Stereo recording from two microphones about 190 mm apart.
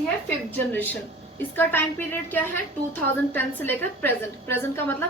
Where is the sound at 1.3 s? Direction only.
10° left (ahead or behind).